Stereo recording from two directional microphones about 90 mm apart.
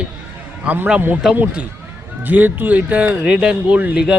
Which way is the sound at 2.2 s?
20° right (ahead or behind).